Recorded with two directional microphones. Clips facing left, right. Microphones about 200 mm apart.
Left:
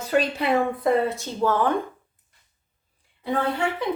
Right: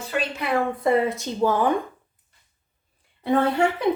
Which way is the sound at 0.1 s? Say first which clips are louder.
Left 6 dB; 40° left (ahead or behind).